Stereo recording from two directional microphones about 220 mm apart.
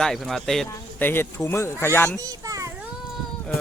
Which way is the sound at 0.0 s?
Centre (ahead or behind).